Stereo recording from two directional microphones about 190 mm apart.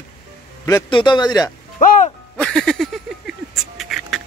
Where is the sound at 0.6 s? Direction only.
20° left (ahead or behind).